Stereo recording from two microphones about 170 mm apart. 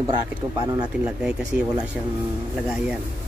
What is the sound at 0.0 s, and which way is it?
Speech, 20° right (ahead or behind).